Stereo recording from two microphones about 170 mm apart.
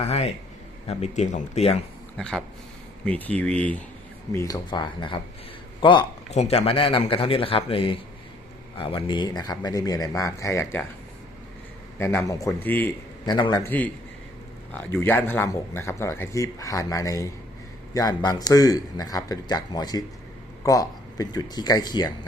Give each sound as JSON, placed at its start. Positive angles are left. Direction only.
{"t": 0.0, "sound": "a man's voice", "side_deg": 35}
{"t": 2.1, "sound": "speech", "side_deg": 5}
{"t": 4.3, "sound": "a man's voice", "side_deg": 20}
{"t": 6.3, "sound": "a man's voice", "side_deg": 40}
{"t": 11.9, "sound": "speech", "side_deg": 15}
{"t": 13.2, "sound": "a man's voice", "side_deg": 25}
{"t": 15.0, "sound": "a man's voice", "side_deg": 10}